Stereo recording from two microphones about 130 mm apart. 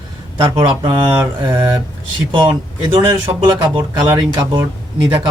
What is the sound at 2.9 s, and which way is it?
Speech, 40° right (ahead or behind).